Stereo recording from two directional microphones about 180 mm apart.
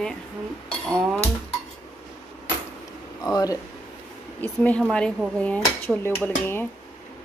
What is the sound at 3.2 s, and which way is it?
Speech, 20° left (ahead or behind).